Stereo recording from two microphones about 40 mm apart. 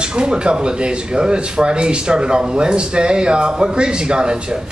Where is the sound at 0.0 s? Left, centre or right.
Right.